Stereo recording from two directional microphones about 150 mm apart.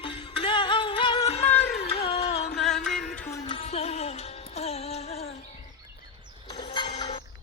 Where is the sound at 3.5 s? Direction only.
40° left (ahead or behind).